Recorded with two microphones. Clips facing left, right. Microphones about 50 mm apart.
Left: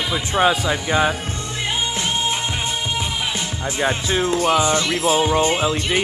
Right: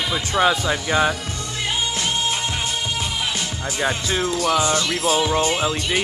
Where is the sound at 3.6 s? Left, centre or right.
Left.